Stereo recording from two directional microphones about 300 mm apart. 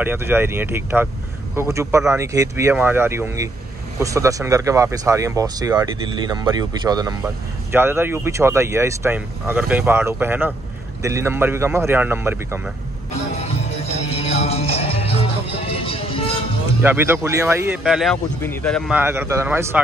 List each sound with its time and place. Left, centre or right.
0.0 s speech: centre
14.0 s music: left
16.8 s speech: centre